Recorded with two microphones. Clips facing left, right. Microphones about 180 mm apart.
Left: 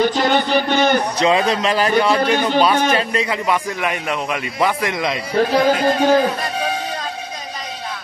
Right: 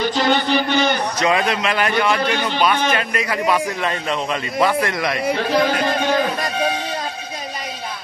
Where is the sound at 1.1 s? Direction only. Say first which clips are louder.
Left 2 dB; 30° left (ahead or behind).